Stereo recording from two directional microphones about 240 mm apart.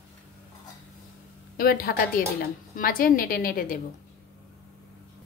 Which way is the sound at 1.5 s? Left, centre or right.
Left.